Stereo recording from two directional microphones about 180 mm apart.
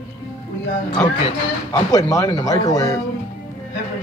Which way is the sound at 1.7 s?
20° left (ahead or behind).